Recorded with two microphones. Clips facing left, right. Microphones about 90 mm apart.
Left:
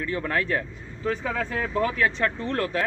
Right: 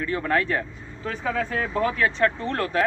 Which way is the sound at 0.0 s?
40° right (ahead or behind).